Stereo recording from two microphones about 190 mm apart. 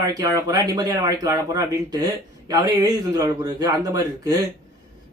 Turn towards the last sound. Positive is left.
turn(degrees=-20)  # may be behind; listen again after turning